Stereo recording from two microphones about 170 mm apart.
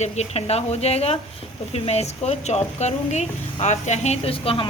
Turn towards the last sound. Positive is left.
turn(degrees=35)  # may be behind; listen again after turning